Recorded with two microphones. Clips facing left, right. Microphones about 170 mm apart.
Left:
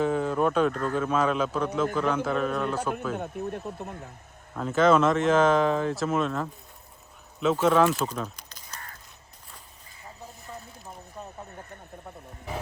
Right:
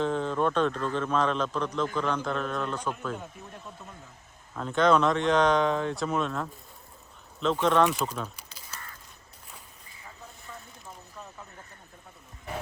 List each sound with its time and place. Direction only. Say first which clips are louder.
0.0 s a man's voice: left 2 dB; 5° left (ahead or behind)
3.2 s speech: left 11 dB; 60° left (ahead or behind)
4.5 s speech: left 2 dB; 5° left (ahead or behind)
7.9 s crow: left 2 dB; centre (ahead or behind)